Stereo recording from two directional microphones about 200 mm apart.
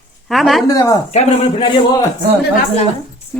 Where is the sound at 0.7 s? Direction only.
15° left (ahead or behind).